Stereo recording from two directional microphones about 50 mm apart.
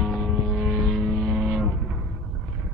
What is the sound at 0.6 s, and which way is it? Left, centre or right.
Vehicle, centre.